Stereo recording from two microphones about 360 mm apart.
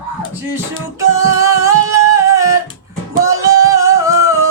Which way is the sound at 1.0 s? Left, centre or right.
Left.